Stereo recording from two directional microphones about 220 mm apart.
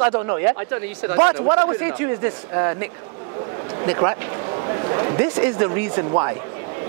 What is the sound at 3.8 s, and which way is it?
A man's voice, 25° right (ahead or behind).